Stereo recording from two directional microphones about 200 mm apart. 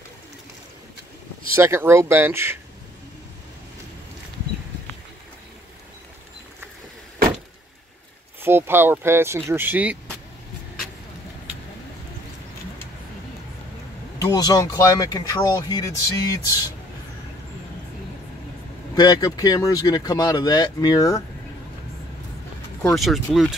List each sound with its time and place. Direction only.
1.5 s speech: 15° right (ahead or behind)
8.4 s speech: 10° right (ahead or behind)
14.1 s speech: 20° left (ahead or behind)
18.9 s speech: 20° left (ahead or behind)
22.8 s speech: centre (ahead or behind)